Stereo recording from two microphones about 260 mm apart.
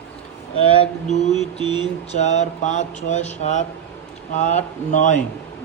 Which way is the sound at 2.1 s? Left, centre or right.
Left.